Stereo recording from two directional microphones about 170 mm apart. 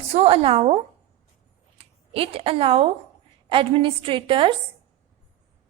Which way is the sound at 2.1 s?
35° right (ahead or behind).